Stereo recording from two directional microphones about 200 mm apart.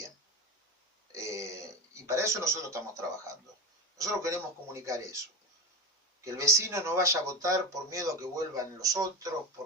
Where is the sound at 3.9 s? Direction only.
15° right (ahead or behind).